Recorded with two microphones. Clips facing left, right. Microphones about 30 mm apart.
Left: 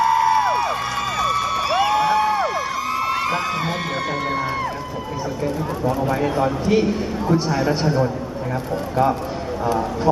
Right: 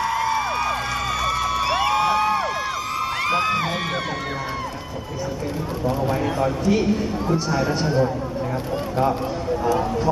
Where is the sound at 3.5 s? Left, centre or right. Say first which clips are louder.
Even; centre.